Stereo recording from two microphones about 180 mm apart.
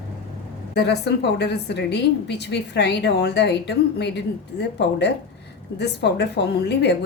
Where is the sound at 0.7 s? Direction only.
65° left (ahead or behind).